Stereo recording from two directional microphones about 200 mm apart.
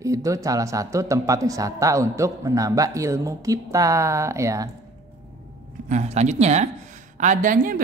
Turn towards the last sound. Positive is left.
turn(degrees=-40)  # may be behind; listen again after turning